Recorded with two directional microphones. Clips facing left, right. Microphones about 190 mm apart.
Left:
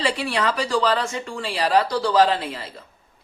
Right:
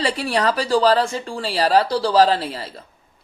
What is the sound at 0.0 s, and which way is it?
Speech, 40° right (ahead or behind).